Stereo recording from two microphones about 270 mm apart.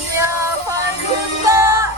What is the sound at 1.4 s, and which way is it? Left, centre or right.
Music, centre.